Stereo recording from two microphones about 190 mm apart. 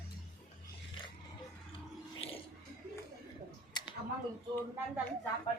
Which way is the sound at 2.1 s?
30° left (ahead or behind).